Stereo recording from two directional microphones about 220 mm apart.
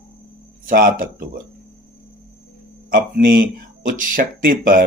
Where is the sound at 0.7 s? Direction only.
40° right (ahead or behind).